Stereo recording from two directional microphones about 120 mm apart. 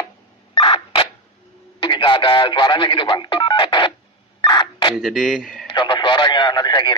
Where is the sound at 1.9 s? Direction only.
40° left (ahead or behind).